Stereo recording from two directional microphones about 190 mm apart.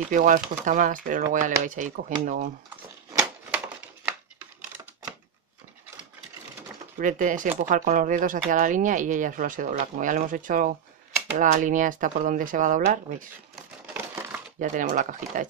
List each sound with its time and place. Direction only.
0.1 s speech: 40° right (ahead or behind)
7.0 s speech: 45° right (ahead or behind)
13.9 s a sound: 10° right (ahead or behind)
14.6 s speech: 45° right (ahead or behind)